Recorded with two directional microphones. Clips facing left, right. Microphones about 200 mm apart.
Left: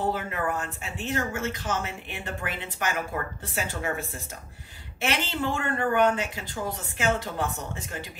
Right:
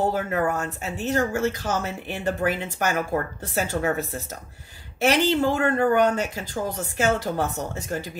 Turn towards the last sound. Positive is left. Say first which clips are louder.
# right 7 dB
turn(degrees=-40)  # may be behind; listen again after turning